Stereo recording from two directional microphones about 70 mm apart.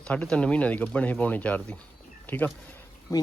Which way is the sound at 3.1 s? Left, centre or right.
Left.